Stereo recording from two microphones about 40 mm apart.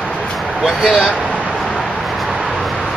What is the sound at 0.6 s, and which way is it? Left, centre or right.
Speech, centre.